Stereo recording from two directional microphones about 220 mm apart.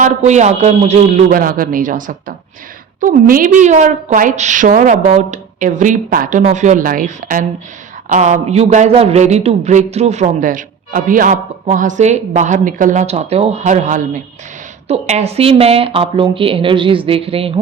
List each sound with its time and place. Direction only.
0.0 s a woman's voice: 30° right (ahead or behind)